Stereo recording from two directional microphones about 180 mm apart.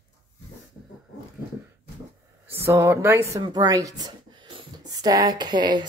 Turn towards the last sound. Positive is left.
turn(degrees=-25)  # may be behind; listen again after turning